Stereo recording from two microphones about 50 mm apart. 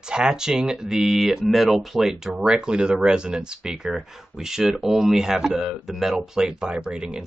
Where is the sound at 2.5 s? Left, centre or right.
Centre.